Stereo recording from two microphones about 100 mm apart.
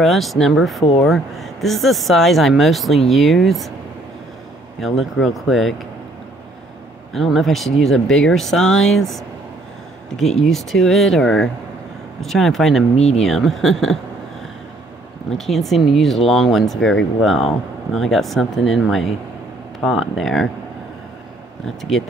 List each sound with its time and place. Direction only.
0.0 s speech: centre (ahead or behind)
4.7 s speech: centre (ahead or behind)
7.2 s speech: centre (ahead or behind)
10.4 s speech: centre (ahead or behind)
12.9 s speech: 90° left
13.2 s speech: 5° left (ahead or behind)
15.3 s speech: 5° left (ahead or behind)
21.6 s speech: 5° left (ahead or behind)